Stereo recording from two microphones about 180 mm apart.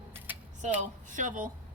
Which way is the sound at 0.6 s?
45° right (ahead or behind).